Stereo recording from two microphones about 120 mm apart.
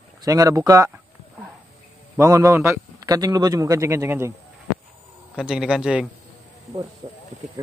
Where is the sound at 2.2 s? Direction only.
25° right (ahead or behind).